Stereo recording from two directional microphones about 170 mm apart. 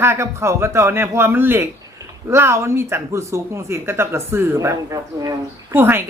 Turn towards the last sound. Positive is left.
turn(degrees=-15)  # may be behind; listen again after turning